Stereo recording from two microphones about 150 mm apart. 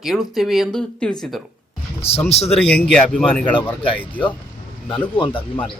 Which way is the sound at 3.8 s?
35° left (ahead or behind).